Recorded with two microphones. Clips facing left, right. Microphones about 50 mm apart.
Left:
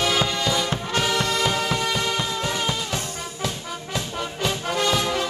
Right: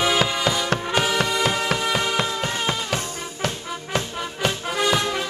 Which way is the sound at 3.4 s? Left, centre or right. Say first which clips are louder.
Right 3 dB; right.